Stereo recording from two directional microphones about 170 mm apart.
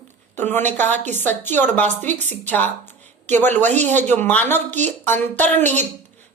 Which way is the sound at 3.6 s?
45° right (ahead or behind).